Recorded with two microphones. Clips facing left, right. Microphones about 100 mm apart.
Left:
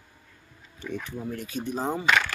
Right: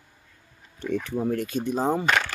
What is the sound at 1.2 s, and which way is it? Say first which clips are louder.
Speech: right 8 dB; 65° right (ahead or behind).